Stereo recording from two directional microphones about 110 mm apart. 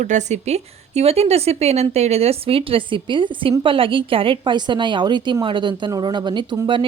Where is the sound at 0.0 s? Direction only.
90° right.